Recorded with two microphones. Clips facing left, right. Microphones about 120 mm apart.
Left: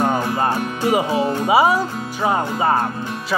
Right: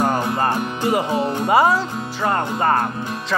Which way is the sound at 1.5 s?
10° left (ahead or behind).